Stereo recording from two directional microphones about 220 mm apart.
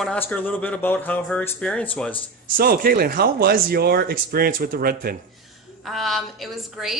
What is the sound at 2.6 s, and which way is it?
Speech, 40° right (ahead or behind).